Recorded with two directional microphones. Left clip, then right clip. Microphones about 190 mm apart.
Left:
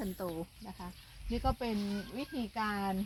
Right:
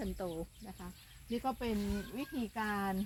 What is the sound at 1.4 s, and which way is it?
Speech, 35° left (ahead or behind).